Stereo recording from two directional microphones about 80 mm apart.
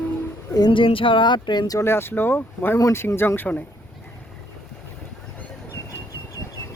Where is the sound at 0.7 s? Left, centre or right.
Left.